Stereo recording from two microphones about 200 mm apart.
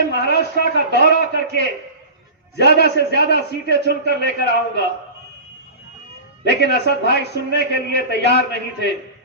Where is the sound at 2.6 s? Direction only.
55° left (ahead or behind).